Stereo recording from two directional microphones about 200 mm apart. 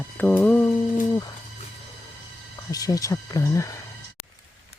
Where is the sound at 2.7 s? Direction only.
20° left (ahead or behind).